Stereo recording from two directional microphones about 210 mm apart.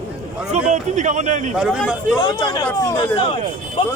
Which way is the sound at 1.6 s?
5° right (ahead or behind).